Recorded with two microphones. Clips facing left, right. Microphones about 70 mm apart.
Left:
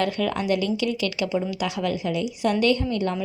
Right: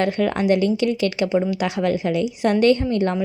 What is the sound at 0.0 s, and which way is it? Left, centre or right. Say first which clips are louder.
A woman's voice: right 4 dB; right.